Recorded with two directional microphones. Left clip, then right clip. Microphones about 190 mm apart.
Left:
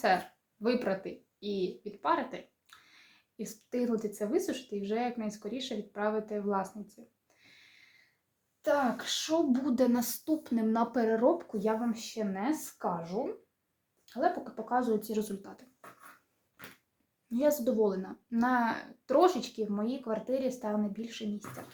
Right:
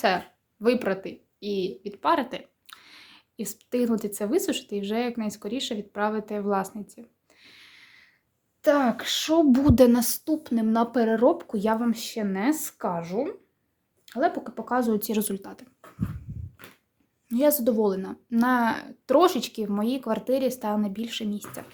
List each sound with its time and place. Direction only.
0.6 s speech: 40° right (ahead or behind)
8.6 s speech: 65° right (ahead or behind); by 11.6 s 35° right (ahead or behind)
11.6 s speech: 50° right (ahead or behind)
17.2 s speech: 35° right (ahead or behind)